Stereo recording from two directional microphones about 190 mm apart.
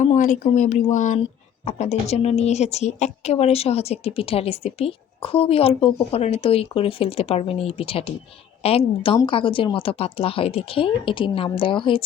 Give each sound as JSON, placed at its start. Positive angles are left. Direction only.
{"t": 0.0, "sound": "speech", "side_deg": 40}